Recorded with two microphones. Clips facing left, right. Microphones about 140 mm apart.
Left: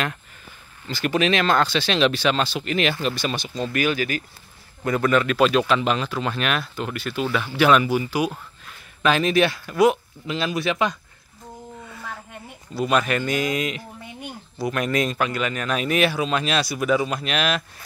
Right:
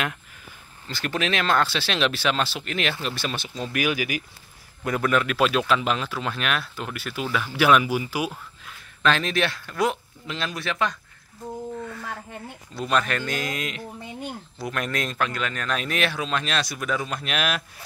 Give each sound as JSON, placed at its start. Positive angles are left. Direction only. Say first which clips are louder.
{"t": 0.8, "sound": "speech", "louder": "left 6 dB", "side_deg": 0}
{"t": 9.0, "sound": "speech", "louder": "left 4 dB", "side_deg": 5}
{"t": 10.6, "sound": "speech", "louder": "left 2 dB", "side_deg": 15}
{"t": 12.7, "sound": "speech", "louder": "left 3 dB", "side_deg": 5}